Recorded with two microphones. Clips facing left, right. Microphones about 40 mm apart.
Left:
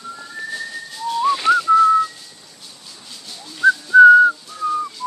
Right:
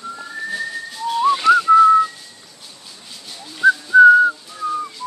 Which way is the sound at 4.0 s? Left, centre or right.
Centre.